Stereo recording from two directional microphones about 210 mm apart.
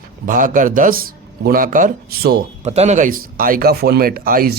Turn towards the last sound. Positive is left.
turn(degrees=-45)  # may be behind; listen again after turning